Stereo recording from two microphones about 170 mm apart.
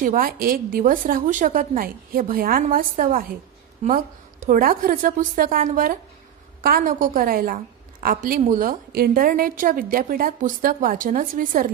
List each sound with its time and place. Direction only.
0.0 s a woman's voice: 55° right (ahead or behind)
4.5 s a woman's voice: 55° right (ahead or behind)